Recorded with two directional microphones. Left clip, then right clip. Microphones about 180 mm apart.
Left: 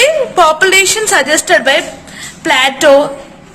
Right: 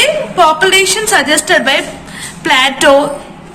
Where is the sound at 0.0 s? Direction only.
55° left (ahead or behind); by 3.1 s 30° left (ahead or behind).